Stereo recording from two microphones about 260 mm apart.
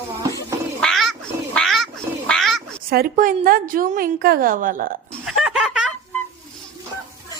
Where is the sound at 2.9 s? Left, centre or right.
Right.